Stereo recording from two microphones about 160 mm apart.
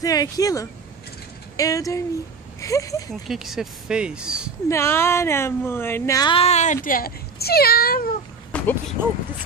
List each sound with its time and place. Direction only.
0.0 s speech: 20° left (ahead or behind)
3.3 s speech: centre (ahead or behind)
4.6 s a woman's voice: 15° left (ahead or behind)
6.3 s speech: 40° left (ahead or behind); by 8.1 s 65° left (ahead or behind)
8.5 s a sound: 10° left (ahead or behind)
9.0 s speech: 15° right (ahead or behind)